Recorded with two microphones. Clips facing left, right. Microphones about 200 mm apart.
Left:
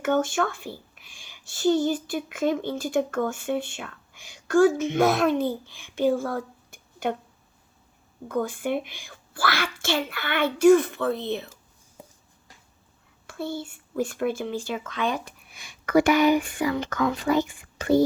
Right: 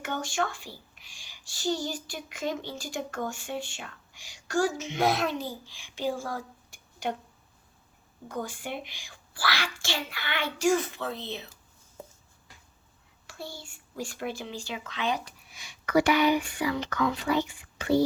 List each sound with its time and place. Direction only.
0.0 s speech: 55° left (ahead or behind)
8.3 s a child's voice: 55° left (ahead or behind)
13.2 s speech: 55° left (ahead or behind)